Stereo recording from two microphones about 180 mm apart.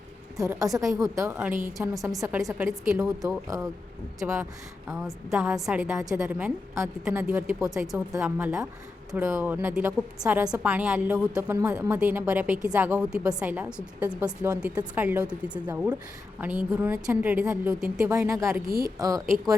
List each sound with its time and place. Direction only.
0.3 s a woman's voice: 20° right (ahead or behind)
2.9 s a woman's voice: centre (ahead or behind)
3.2 s a woman's voice: 20° right (ahead or behind)
18.0 s a woman's voice: 15° right (ahead or behind)